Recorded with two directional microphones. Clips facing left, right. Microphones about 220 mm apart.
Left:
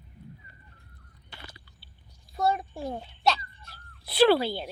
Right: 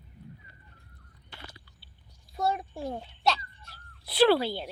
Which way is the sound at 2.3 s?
5° right (ahead or behind).